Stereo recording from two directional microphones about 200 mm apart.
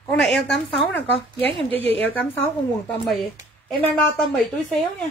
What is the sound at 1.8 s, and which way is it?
Speech, 65° left (ahead or behind).